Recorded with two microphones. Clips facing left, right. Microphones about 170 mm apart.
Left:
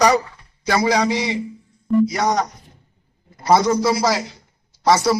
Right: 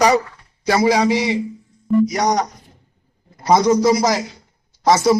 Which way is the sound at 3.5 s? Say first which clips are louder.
Right 2 dB; 15° right (ahead or behind).